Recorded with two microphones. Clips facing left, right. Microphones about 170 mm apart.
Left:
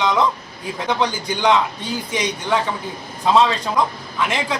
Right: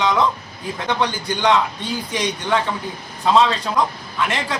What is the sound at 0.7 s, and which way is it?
A man's voice, 10° left (ahead or behind).